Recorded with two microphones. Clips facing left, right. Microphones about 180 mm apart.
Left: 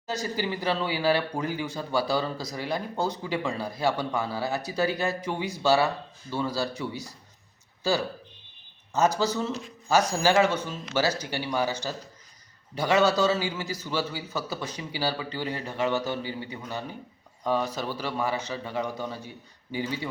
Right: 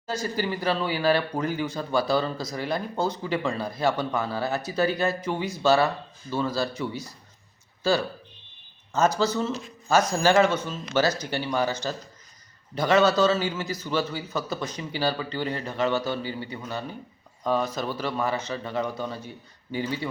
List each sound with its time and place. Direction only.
0.1 s speech: 15° left (ahead or behind)
8.9 s speech: 15° left (ahead or behind)